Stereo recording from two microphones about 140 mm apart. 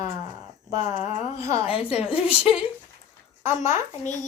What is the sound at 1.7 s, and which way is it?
Speech, 40° left (ahead or behind).